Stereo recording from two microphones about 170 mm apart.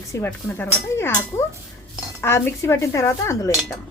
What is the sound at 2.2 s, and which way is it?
Speech, 15° left (ahead or behind).